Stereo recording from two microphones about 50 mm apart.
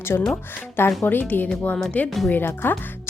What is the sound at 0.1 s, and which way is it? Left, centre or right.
Speech, left.